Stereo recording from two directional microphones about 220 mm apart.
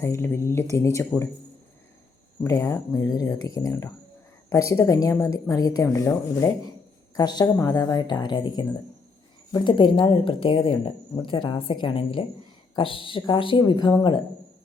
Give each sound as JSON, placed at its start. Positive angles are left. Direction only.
{"t": 0.0, "sound": "speech", "side_deg": 10}
{"t": 2.4, "sound": "speech", "side_deg": 15}